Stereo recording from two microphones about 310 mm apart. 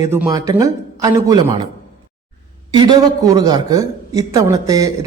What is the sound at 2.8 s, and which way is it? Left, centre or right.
A woman's voice, centre.